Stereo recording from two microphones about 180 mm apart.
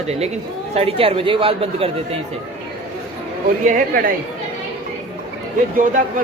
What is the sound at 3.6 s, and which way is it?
Speech, 50° right (ahead or behind).